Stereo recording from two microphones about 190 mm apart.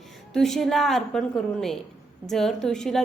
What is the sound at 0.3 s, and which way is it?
A woman's voice, centre (ahead or behind).